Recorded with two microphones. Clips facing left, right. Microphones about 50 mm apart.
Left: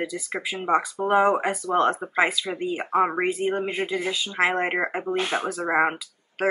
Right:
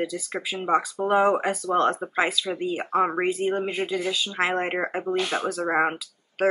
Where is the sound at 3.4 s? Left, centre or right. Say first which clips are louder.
Even; centre.